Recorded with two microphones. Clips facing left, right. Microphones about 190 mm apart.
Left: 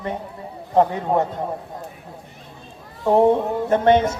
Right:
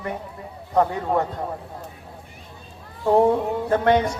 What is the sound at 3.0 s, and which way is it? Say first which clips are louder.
A man's voice: left 2 dB; 25° left (ahead or behind).